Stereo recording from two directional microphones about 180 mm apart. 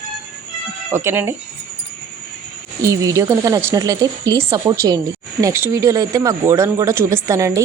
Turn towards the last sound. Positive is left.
turn(degrees=-15)  # may be behind; listen again after turning